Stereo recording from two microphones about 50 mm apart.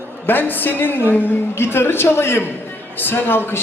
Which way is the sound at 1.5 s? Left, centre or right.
Left.